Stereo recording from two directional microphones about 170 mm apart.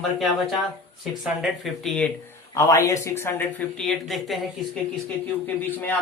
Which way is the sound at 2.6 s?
15° left (ahead or behind).